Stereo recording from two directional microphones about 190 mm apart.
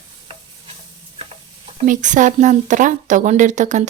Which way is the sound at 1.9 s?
40° right (ahead or behind).